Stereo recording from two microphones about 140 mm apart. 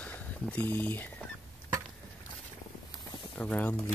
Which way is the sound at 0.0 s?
10° left (ahead or behind).